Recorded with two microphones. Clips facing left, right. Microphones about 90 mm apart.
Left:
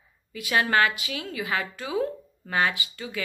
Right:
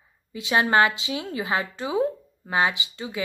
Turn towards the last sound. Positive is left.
turn(degrees=-20)  # may be behind; listen again after turning